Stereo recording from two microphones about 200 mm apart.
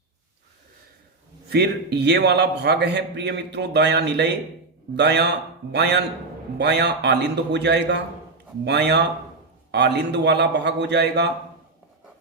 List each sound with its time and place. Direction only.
1.5 s a man's voice: 55° right (ahead or behind)